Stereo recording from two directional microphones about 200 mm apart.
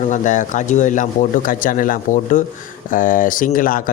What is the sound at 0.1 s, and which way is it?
A man's voice, 40° left (ahead or behind).